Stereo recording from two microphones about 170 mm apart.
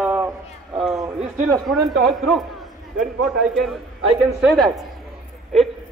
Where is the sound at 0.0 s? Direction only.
15° right (ahead or behind).